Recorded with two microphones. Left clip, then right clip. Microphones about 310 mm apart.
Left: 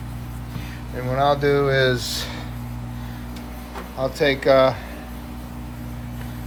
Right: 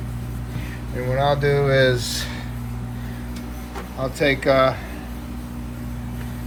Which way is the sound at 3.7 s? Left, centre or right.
Centre.